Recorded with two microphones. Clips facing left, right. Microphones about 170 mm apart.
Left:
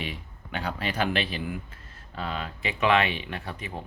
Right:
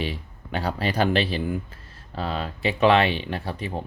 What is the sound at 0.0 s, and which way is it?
Speech, 35° right (ahead or behind).